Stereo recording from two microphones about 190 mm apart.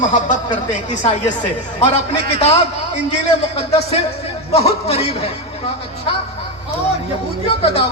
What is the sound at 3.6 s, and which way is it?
A man's voice, 30° left (ahead or behind).